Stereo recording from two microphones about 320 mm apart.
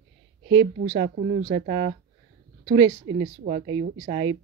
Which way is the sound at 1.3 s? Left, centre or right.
Right.